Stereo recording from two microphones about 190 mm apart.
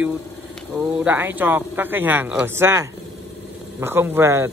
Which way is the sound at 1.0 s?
10° right (ahead or behind).